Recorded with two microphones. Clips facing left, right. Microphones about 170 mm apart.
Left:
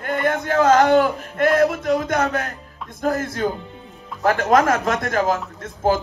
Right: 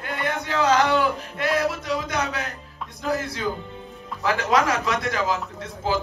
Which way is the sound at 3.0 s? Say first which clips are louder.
Left 4 dB; 50° left (ahead or behind).